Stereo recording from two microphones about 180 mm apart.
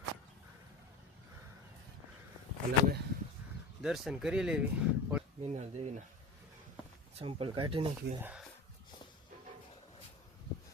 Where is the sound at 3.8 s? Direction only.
Centre (ahead or behind).